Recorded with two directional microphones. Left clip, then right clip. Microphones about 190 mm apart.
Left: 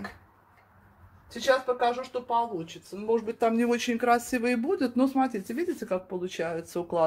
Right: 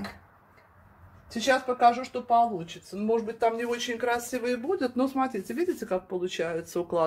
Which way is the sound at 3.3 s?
50° left (ahead or behind).